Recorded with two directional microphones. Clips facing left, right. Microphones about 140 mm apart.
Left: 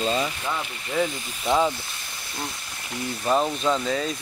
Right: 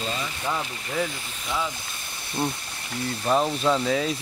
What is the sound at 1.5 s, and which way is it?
Speech, 40° left (ahead or behind).